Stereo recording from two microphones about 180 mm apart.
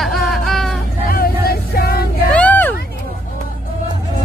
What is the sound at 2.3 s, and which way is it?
Vehicle, 10° left (ahead or behind).